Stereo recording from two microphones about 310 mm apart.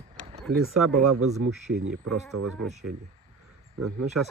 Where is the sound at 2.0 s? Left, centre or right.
Right.